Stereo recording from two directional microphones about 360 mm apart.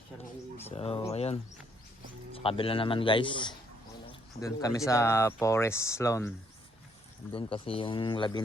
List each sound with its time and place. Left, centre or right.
0.6 s a man's voice: centre
7.3 s speech: centre